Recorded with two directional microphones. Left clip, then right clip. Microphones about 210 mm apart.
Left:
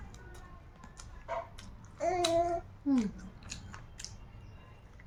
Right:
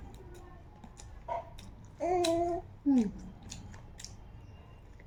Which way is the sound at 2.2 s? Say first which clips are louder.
Left 1 dB; 20° left (ahead or behind).